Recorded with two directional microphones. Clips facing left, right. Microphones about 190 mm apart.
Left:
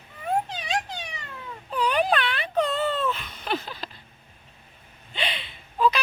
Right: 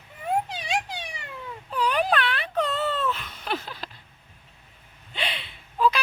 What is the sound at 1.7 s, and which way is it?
Wail, centre (ahead or behind).